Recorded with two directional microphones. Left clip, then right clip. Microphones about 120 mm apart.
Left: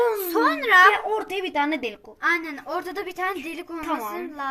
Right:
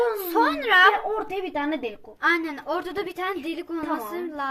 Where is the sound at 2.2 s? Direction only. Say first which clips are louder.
Right 1 dB; 35° right (ahead or behind).